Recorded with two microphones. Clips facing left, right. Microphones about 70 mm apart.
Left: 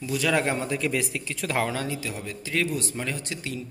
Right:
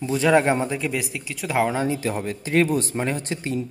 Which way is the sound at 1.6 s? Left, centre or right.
Right.